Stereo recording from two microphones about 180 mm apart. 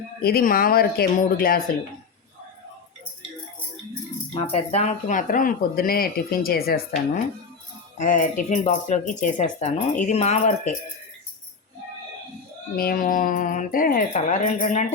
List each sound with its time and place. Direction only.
0.2 s speech: 60° left (ahead or behind)
4.4 s speech: 35° left (ahead or behind); by 6.8 s 55° left (ahead or behind)
7.9 s speech: 45° left (ahead or behind)
12.7 s speech: 55° left (ahead or behind)